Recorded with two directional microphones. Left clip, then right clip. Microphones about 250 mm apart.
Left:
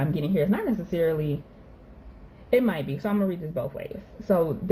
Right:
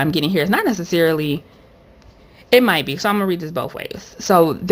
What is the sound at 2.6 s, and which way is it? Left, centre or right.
A woman's voice, right.